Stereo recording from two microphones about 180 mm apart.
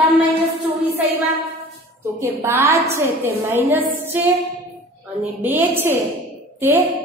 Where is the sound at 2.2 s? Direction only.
15° right (ahead or behind).